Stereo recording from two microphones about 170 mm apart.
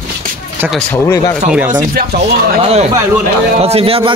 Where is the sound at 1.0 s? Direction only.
20° left (ahead or behind).